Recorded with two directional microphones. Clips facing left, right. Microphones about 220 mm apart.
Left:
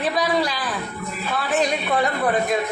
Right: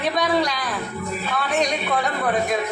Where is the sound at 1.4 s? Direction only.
Centre (ahead or behind).